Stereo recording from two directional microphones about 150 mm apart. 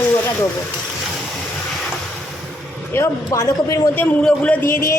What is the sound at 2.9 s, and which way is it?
Speech, 20° left (ahead or behind).